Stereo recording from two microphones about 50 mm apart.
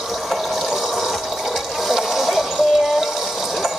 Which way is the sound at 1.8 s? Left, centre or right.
Centre.